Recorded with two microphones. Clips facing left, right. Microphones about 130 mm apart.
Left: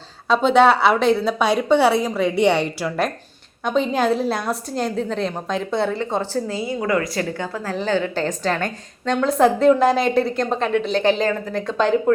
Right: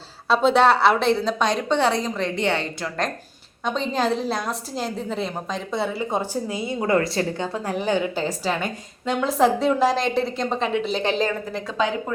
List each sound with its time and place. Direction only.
0.3 s a woman's voice: centre (ahead or behind)